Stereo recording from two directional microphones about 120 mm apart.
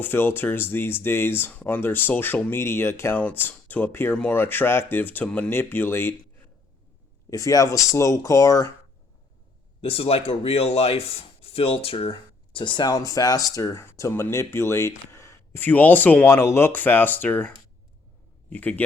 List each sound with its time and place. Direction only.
0.0 s speech: 20° left (ahead or behind)
9.8 s speech: 55° left (ahead or behind); by 17.5 s 15° left (ahead or behind)
18.5 s speech: 15° left (ahead or behind)